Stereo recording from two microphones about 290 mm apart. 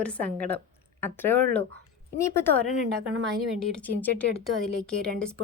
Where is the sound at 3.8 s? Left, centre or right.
Centre.